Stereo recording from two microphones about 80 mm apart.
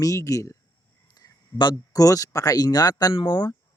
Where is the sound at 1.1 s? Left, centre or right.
Left.